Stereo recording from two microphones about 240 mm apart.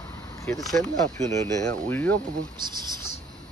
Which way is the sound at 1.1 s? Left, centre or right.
Centre.